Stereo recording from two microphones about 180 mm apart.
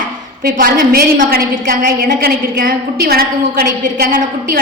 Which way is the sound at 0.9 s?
50° right (ahead or behind).